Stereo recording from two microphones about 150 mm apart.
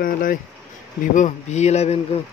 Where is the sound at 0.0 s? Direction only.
70° left (ahead or behind).